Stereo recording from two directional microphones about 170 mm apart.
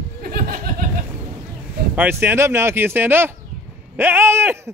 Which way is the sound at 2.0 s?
15° right (ahead or behind).